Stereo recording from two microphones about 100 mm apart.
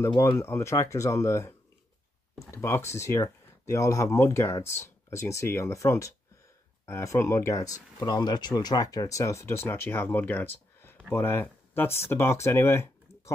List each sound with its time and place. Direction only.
0.2 s speech: 25° left (ahead or behind)
2.5 s speech: 25° left (ahead or behind)